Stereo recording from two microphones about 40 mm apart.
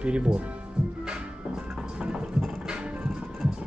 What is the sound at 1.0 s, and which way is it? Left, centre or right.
Music, right.